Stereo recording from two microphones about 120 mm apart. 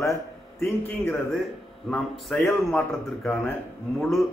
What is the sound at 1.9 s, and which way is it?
Speech, centre (ahead or behind).